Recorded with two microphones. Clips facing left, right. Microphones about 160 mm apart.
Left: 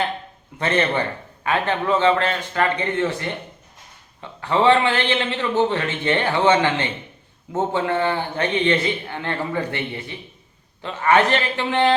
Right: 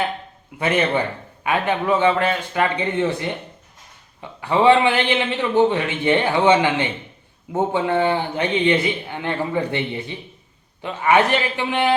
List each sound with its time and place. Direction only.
0.6 s a man's voice: 10° right (ahead or behind)